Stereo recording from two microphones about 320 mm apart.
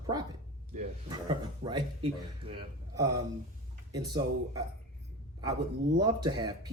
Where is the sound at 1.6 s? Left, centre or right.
Centre.